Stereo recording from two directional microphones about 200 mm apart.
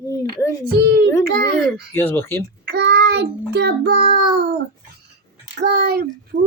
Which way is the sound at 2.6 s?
55° right (ahead or behind).